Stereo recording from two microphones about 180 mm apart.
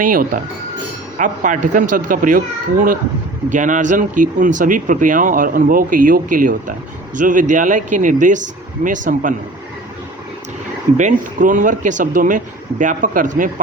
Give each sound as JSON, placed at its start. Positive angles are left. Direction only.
{"t": 0.0, "sound": "speech", "side_deg": -50}
{"t": 10.9, "sound": "speech", "side_deg": -45}